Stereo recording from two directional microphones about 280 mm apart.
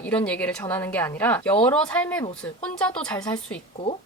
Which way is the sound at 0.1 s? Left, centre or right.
Centre.